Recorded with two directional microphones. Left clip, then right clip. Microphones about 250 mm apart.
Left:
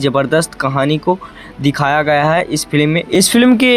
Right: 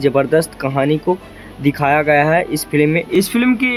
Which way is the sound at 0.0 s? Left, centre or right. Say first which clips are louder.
Even; centre.